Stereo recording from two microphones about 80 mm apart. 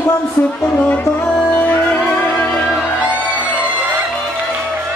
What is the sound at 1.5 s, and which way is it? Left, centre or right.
Music, left.